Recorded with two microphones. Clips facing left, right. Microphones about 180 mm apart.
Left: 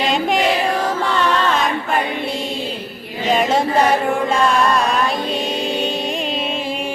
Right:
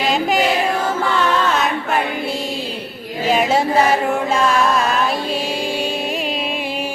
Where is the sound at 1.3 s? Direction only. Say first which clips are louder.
Even; 5° right (ahead or behind).